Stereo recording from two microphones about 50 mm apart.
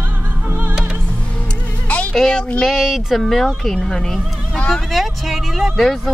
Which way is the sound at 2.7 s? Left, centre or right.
Centre.